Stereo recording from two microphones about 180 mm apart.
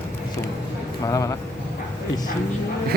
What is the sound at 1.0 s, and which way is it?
Speech, 20° left (ahead or behind).